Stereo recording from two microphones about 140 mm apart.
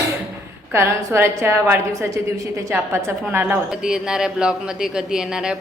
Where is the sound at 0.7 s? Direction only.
20° right (ahead or behind).